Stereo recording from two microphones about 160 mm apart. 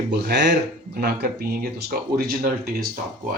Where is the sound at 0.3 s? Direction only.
90° right.